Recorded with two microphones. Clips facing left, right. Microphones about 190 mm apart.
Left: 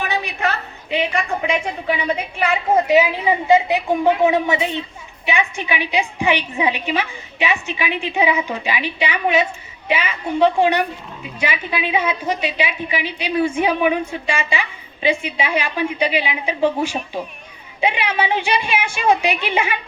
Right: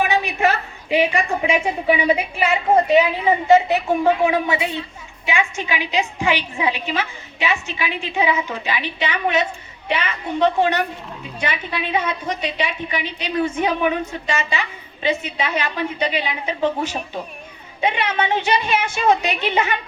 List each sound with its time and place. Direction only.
0.9 s a woman's voice: 5° right (ahead or behind); by 19.7 s 10° left (ahead or behind)